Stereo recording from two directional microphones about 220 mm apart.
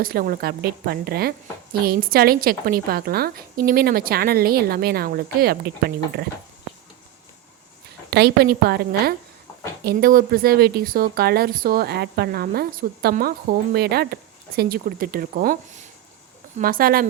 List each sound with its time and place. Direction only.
0.0 s speech: 40° right (ahead or behind)
8.1 s speech: 50° right (ahead or behind)
16.6 s speech: 40° right (ahead or behind)